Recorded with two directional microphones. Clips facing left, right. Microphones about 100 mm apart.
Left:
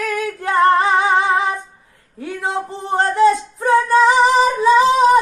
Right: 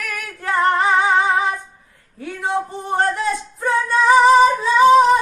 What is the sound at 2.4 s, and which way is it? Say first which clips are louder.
Music: right 1 dB; 25° left (ahead or behind).